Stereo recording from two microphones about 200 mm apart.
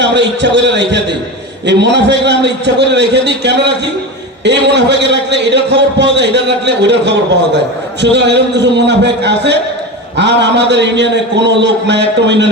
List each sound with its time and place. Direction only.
0.0 s a man's voice: 65° right (ahead or behind)